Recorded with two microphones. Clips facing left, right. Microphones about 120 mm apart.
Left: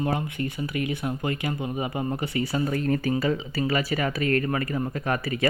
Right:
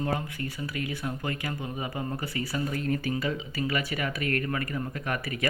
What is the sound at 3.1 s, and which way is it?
Speech, 35° left (ahead or behind).